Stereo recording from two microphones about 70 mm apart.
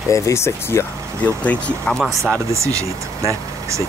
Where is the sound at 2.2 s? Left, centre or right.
Right.